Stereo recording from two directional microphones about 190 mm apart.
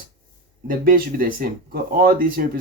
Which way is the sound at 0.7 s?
50° right (ahead or behind).